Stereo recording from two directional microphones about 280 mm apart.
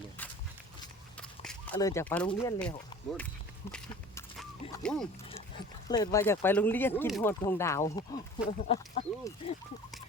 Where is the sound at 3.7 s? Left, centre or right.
Centre.